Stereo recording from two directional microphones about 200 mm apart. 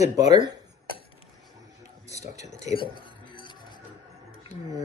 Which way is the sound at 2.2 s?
15° right (ahead or behind).